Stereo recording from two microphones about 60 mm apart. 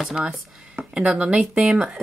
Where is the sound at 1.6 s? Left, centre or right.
Centre.